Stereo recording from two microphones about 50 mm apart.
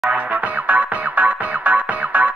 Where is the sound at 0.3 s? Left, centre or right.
Right.